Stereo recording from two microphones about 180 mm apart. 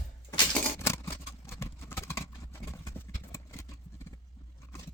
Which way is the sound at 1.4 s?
15° left (ahead or behind).